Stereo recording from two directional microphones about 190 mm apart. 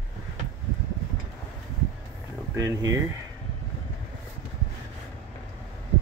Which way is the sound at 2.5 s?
20° right (ahead or behind).